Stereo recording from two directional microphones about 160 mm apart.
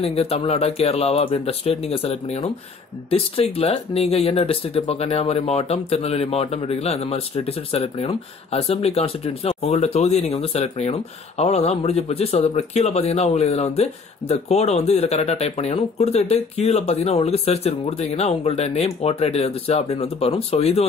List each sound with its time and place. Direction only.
0.0 s speech: 40° left (ahead or behind)